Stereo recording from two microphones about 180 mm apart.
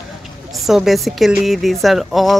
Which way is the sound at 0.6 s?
Centre (ahead or behind).